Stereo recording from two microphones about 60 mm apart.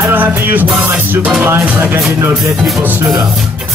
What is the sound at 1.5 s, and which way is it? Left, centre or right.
Speech, right.